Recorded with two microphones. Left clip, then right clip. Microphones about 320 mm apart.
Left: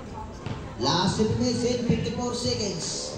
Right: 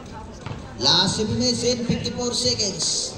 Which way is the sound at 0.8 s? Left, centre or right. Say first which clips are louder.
Right 5 dB; right.